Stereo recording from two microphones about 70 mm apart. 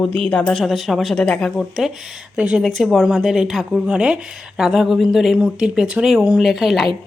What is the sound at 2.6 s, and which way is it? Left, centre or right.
Speech, centre.